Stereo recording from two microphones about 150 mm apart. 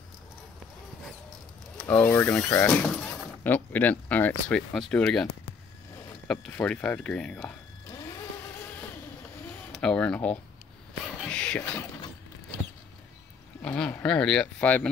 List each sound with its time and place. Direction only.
1.8 s speech: 10° left (ahead or behind)
6.3 s speech: 10° left (ahead or behind)
7.9 s vehicle: 20° left (ahead or behind)
9.7 s speech: 5° left (ahead or behind)
11.2 s a sound: 5° left (ahead or behind)
13.6 s speech: 5° left (ahead or behind)